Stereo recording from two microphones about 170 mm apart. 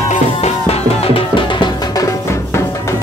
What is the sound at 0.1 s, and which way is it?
Music, 35° left (ahead or behind).